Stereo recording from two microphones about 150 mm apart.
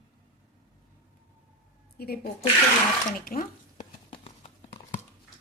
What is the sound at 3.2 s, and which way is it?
Speech, 75° left (ahead or behind).